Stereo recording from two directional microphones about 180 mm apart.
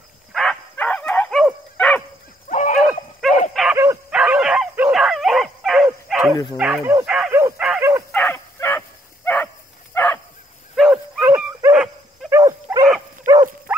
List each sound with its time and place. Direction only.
0.3 s a sound: centre (ahead or behind)
1.4 s dog: 5° left (ahead or behind)
2.5 s a sound: 45° left (ahead or behind)
2.9 s dog: centre (ahead or behind)
3.7 s dog: 15° right (ahead or behind)
6.5 s speech: 5° right (ahead or behind)
7.1 s bow-wow: 10° right (ahead or behind)
8.1 s dog: 10° left (ahead or behind)
9.9 s bow-wow: 10° left (ahead or behind)
10.8 s dog: 5° right (ahead or behind)